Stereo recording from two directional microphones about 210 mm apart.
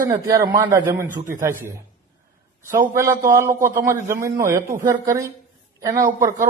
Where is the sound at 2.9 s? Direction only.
15° right (ahead or behind).